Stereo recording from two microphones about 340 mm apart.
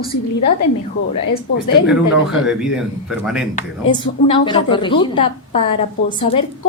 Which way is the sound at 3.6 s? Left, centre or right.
Centre.